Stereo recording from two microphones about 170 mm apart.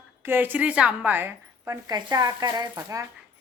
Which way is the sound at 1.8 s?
25° right (ahead or behind).